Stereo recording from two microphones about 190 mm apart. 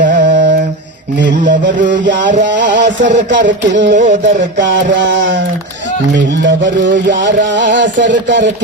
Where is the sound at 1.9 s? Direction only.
70° right (ahead or behind).